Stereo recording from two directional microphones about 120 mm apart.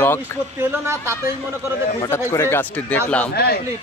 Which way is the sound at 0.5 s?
20° right (ahead or behind).